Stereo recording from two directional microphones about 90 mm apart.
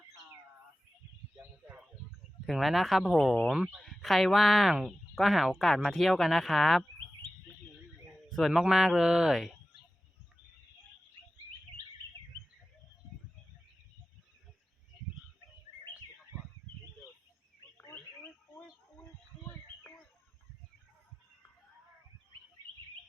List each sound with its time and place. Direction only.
1.4 s a sound: 20° right (ahead or behind)
2.5 s speech: centre (ahead or behind)
3.8 s speech: centre (ahead or behind)
8.3 s a man's voice: centre (ahead or behind)